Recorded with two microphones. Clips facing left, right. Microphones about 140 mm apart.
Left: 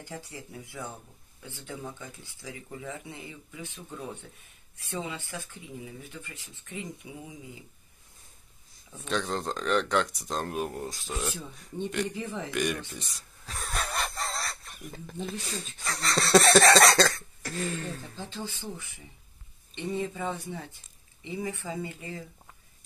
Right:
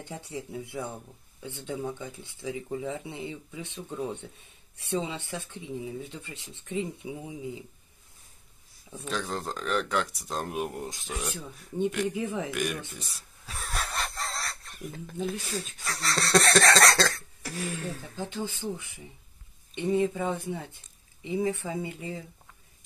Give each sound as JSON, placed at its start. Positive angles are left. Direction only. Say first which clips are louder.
{"t": 0.0, "sound": "speech", "louder": "right 4 dB", "side_deg": -25}
{"t": 4.9, "sound": "speech", "louder": "right 4 dB", "side_deg": -25}
{"t": 8.9, "sound": "speech", "louder": "left 2 dB", "side_deg": -5}
{"t": 10.5, "sound": "speech", "louder": "even", "side_deg": -15}
{"t": 11.2, "sound": "speech", "louder": "left 1 dB", "side_deg": 0}
{"t": 12.5, "sound": "speech", "louder": "left 2 dB", "side_deg": -5}
{"t": 18.2, "sound": "speech", "louder": "right 6 dB", "side_deg": -20}